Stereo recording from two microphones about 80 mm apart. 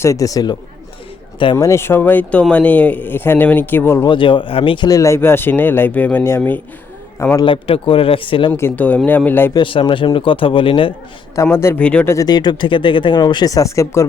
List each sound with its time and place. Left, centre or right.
0.0 s speech: left
1.5 s a man's voice: left
4.0 s speech: left
4.9 s a man's voice: left
7.4 s speech: left
8.7 s a man's voice: centre
9.6 s speech: left
11.5 s speech: left
11.8 s speech: centre
12.2 s speech: left